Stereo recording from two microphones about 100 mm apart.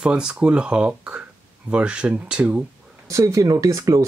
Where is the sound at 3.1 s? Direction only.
35° right (ahead or behind).